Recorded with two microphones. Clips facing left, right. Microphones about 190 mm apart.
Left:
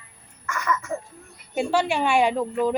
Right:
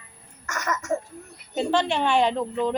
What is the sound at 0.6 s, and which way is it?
Speech, 45° right (ahead or behind).